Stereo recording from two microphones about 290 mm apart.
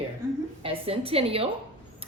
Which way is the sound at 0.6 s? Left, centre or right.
Centre.